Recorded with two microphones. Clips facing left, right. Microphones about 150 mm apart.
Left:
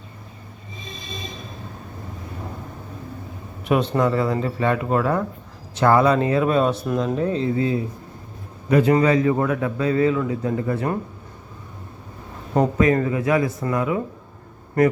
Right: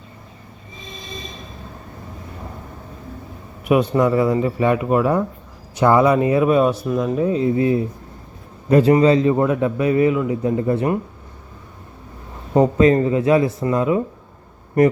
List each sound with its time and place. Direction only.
3.7 s a man's voice: 10° right (ahead or behind)
12.5 s a man's voice: 25° right (ahead or behind)